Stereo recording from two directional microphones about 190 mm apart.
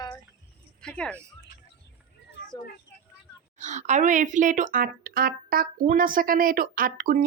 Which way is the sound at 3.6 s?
40° right (ahead or behind).